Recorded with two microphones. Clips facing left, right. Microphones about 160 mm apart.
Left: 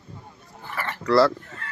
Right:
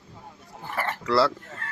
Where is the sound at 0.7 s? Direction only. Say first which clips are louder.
Right 2 dB; 45° right (ahead or behind).